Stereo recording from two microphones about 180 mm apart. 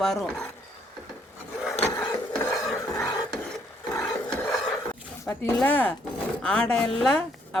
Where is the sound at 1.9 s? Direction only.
20° left (ahead or behind).